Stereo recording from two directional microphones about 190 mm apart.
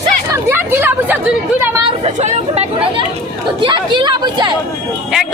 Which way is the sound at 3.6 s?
25° right (ahead or behind).